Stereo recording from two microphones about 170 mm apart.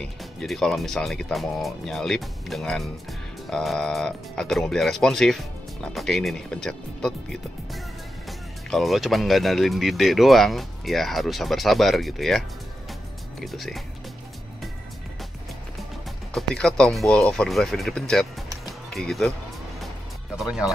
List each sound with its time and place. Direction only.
0.0 s speech: centre (ahead or behind)
8.3 s speech: centre (ahead or behind)
16.3 s speech: 5° left (ahead or behind)
18.7 s music: centre (ahead or behind)
20.4 s speech: 5° right (ahead or behind)